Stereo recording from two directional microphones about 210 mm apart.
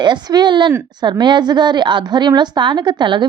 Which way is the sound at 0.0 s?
20° right (ahead or behind).